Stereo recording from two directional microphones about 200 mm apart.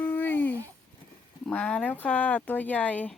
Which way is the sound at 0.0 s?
10° left (ahead or behind).